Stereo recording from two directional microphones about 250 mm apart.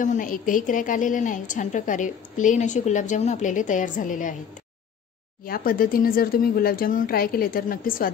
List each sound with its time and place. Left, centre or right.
0.0 s a woman's voice: left
5.4 s a woman's voice: left